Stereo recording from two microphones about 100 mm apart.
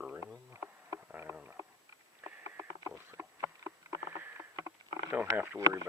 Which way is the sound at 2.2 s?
20° right (ahead or behind).